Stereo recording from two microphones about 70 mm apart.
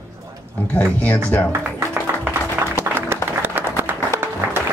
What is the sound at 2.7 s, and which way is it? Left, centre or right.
Music, right.